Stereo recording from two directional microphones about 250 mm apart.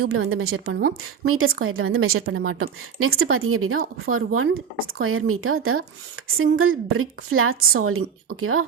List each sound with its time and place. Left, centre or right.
0.0 s a woman's voice: right